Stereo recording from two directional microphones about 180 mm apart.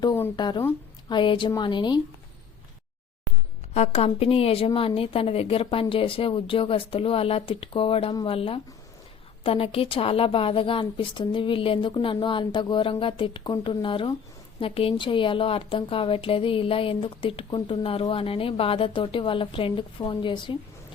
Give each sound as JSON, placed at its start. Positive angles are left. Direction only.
{"t": 0.0, "sound": "a woman's voice", "side_deg": 20}
{"t": 3.8, "sound": "a woman's voice", "side_deg": 35}